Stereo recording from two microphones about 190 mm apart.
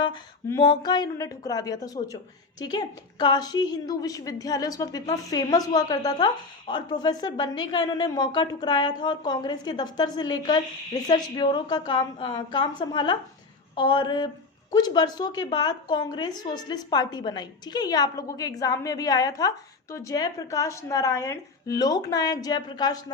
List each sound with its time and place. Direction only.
0.4 s a woman's voice: 20° left (ahead or behind)